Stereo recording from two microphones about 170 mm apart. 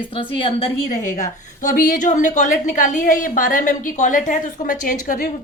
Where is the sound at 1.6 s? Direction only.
55° left (ahead or behind).